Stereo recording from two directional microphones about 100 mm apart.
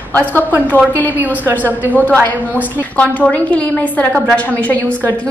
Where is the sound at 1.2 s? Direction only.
20° right (ahead or behind).